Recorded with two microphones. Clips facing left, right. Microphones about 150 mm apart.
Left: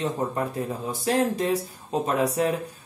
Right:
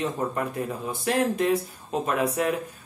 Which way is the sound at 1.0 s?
35° left (ahead or behind).